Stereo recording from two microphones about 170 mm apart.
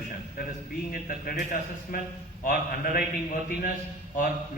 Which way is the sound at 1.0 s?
60° left (ahead or behind).